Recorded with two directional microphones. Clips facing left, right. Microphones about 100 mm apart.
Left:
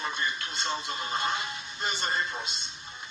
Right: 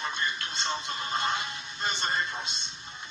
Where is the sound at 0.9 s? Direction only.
25° left (ahead or behind).